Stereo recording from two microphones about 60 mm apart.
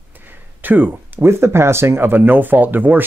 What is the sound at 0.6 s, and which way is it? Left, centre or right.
Speech, right.